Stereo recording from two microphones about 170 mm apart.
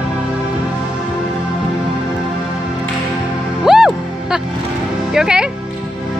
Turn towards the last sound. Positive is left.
turn(degrees=-5)  # may be behind; listen again after turning